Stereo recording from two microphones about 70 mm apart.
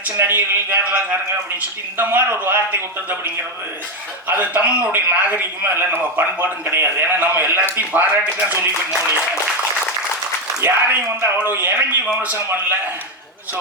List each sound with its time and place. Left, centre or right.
0.2 s a man's voice: right
4.3 s a man's voice: right
8.6 s speech: right
10.6 s a man's voice: right
12.0 s a man's voice: centre